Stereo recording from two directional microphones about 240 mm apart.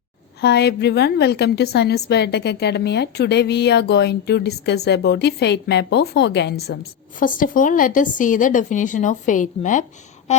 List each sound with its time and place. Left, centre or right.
0.4 s a woman's voice: left
7.2 s a woman's voice: left